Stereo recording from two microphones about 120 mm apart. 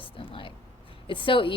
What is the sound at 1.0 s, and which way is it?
Speech, 45° left (ahead or behind).